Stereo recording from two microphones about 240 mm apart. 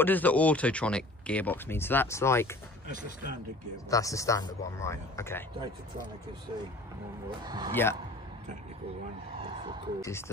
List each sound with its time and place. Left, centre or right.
0.0 s speech: centre
3.9 s speech: centre
7.2 s a man's voice: centre
7.7 s speech: centre
9.3 s speech: right
10.0 s speech: centre